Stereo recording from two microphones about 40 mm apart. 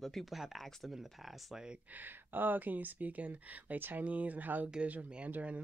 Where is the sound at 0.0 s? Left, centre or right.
Centre.